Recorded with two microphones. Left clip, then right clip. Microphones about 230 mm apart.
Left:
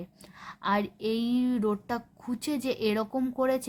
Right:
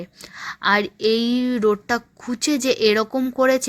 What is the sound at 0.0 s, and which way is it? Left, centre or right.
A woman's voice, centre.